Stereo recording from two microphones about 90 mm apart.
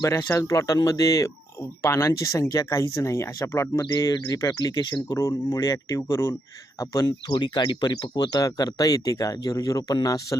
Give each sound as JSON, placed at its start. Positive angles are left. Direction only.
{"t": 0.2, "sound": "speech", "side_deg": 30}
{"t": 5.1, "sound": "speech", "side_deg": 35}